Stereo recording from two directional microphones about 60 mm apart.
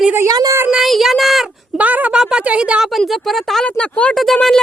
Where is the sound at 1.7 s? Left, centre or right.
Right.